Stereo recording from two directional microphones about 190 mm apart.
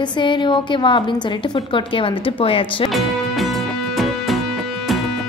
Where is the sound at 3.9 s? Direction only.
Centre (ahead or behind).